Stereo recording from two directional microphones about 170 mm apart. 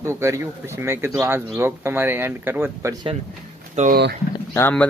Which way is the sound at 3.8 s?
40° right (ahead or behind).